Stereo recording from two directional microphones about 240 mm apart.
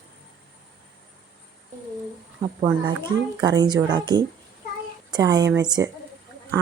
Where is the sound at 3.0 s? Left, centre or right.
Centre.